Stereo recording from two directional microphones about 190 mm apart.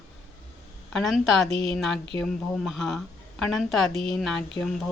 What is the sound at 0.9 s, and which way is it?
Speech, centre (ahead or behind).